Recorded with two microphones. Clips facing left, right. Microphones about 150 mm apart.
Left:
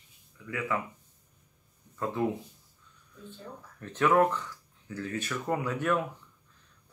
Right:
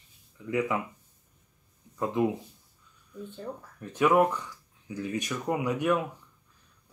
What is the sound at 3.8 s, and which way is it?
Speech, 10° right (ahead or behind).